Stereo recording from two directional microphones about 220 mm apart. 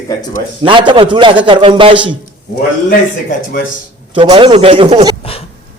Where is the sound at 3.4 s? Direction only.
40° left (ahead or behind).